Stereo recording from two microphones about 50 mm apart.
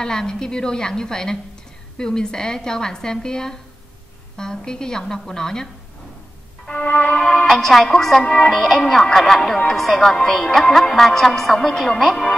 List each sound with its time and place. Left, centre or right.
0.0 s a woman's voice: centre
6.6 s music: left
7.2 s a woman's voice: centre
7.4 s a woman's voice: centre